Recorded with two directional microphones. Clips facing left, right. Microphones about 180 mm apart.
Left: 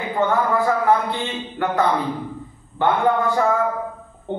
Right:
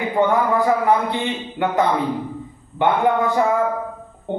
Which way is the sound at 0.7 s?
15° right (ahead or behind).